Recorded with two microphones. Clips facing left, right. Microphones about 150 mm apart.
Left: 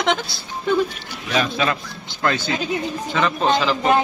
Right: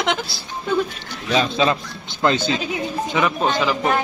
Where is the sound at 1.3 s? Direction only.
25° right (ahead or behind).